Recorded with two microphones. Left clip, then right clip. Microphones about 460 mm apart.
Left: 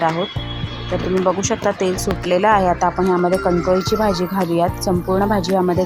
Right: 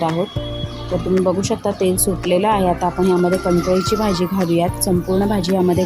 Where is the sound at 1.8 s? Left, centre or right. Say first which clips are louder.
Right 1 dB; right.